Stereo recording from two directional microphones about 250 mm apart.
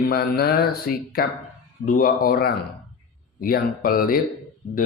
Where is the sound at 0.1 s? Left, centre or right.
Left.